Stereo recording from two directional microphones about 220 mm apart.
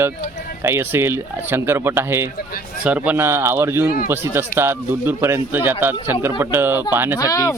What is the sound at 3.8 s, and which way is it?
Speech, 40° left (ahead or behind).